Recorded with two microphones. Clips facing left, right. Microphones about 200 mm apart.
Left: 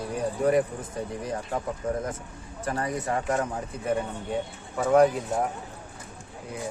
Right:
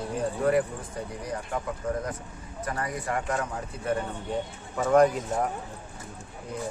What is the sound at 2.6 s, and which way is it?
Speech, 25° left (ahead or behind).